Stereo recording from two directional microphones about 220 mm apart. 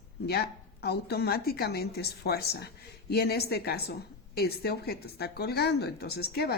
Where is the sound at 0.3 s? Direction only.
45° left (ahead or behind).